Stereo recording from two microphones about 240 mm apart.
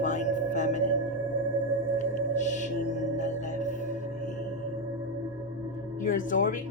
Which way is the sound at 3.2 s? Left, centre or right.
Left.